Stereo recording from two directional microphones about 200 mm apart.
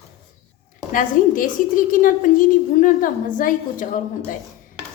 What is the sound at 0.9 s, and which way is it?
A woman's voice, 40° left (ahead or behind).